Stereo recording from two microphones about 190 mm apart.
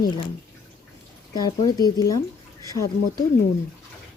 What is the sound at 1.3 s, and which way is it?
Speech, 20° left (ahead or behind).